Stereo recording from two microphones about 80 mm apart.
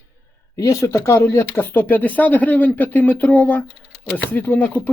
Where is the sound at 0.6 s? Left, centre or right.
Left.